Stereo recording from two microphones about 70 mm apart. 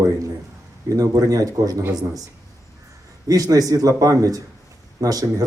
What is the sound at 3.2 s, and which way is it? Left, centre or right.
Speech, right.